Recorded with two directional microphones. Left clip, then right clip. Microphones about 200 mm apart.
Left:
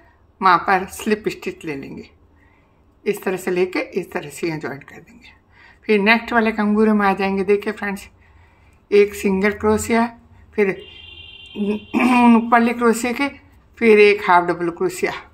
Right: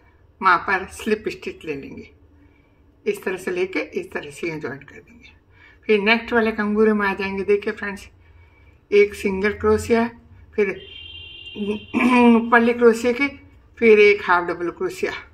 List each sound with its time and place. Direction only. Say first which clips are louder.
0.4 s speech: left 3 dB; 30° left (ahead or behind)